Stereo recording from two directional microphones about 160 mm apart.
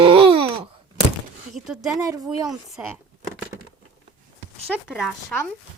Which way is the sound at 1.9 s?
20° right (ahead or behind).